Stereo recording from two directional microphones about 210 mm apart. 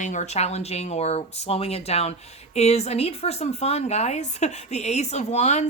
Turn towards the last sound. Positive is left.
turn(degrees=35)  # may be behind; listen again after turning